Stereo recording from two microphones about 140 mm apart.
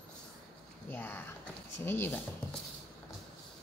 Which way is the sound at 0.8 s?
15° left (ahead or behind).